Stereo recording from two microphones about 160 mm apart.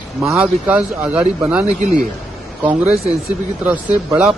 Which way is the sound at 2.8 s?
40° right (ahead or behind).